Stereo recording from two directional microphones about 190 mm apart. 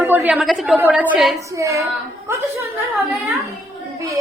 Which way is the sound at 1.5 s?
15° right (ahead or behind).